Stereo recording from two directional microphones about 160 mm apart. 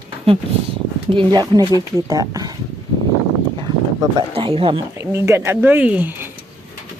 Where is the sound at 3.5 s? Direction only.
30° right (ahead or behind).